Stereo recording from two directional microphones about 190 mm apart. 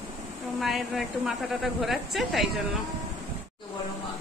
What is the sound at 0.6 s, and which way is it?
A woman's voice, centre (ahead or behind).